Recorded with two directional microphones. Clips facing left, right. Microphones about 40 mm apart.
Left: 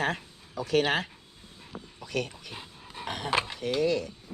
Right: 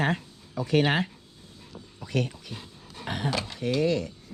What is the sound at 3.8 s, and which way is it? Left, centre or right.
Speech, centre.